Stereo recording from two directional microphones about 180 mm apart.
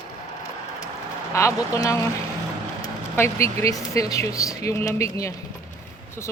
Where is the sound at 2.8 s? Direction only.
15° left (ahead or behind).